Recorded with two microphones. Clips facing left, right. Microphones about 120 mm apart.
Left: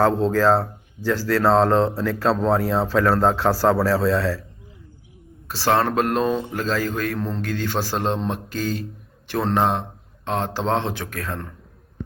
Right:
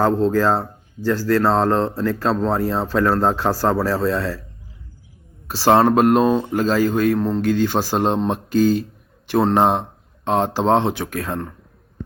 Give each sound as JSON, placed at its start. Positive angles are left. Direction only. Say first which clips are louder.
{"t": 0.0, "sound": "a man's voice", "louder": "right 1 dB", "side_deg": -5}
{"t": 5.5, "sound": "a man's voice", "louder": "right 6 dB", "side_deg": -15}